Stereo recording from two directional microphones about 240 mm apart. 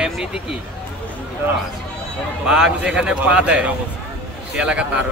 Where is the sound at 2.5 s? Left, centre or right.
Centre.